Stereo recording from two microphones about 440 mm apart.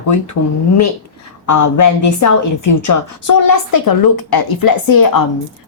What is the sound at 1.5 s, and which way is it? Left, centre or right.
A woman's voice, left.